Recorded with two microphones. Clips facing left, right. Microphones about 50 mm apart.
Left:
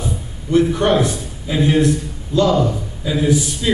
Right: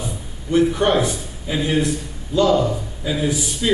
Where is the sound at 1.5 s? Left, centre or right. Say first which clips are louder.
Left 5 dB; centre.